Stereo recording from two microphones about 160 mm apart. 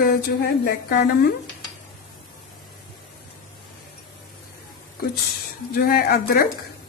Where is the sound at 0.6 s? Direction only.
80° left.